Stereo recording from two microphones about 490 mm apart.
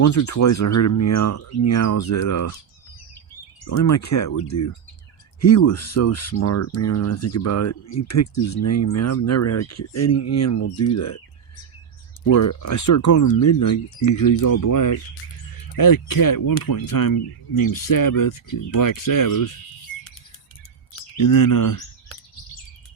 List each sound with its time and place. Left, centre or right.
0.0 s speech: left
3.6 s speech: left
12.2 s speech: left
21.2 s speech: left